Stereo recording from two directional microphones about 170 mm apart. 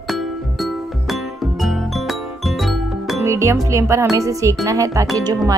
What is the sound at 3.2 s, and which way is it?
Speech, 15° right (ahead or behind).